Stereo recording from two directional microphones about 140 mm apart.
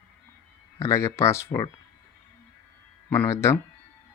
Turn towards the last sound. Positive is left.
turn(degrees=20)  # may be behind; listen again after turning